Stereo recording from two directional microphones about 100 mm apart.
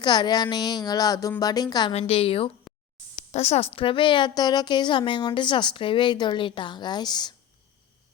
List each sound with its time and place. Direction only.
0.0 s speech: 45° left (ahead or behind)
1.9 s a woman's voice: 90° left; by 2.5 s 70° left (ahead or behind)
3.3 s a woman's voice: 90° left; by 7.3 s 45° left (ahead or behind)